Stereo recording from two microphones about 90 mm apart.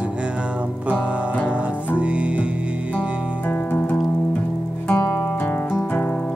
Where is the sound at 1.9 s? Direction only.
15° right (ahead or behind).